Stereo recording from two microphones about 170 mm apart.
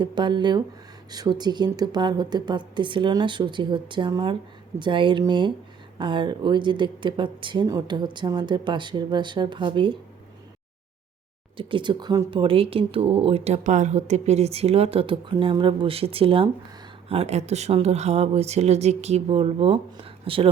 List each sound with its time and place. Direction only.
0.0 s speech: 25° right (ahead or behind)
11.5 s speech: 30° right (ahead or behind)